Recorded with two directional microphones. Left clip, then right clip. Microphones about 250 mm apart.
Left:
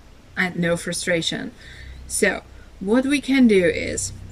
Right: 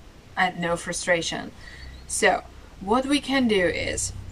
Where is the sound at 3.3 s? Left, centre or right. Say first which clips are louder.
Left 6 dB; centre.